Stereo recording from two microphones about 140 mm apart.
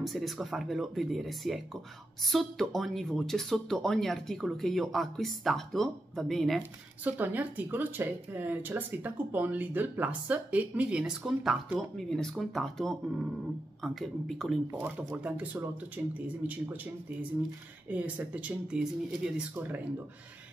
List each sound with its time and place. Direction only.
0.0 s speech: centre (ahead or behind)
7.1 s speech: 10° right (ahead or behind)
14.7 s speech: 15° right (ahead or behind)
17.8 s speech: 10° right (ahead or behind)